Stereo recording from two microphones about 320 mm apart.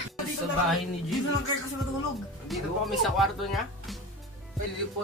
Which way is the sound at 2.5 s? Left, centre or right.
Centre.